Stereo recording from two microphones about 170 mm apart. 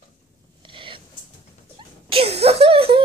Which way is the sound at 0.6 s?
30° right (ahead or behind).